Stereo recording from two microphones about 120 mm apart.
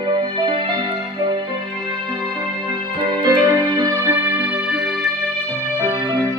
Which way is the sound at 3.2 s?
30° right (ahead or behind).